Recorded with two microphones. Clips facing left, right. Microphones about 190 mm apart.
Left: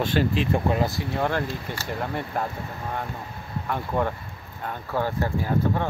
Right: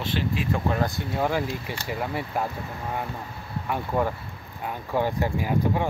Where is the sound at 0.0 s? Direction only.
45° left (ahead or behind).